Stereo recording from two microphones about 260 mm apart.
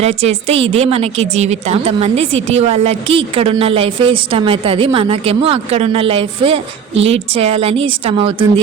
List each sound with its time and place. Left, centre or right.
0.0 s a woman's voice: right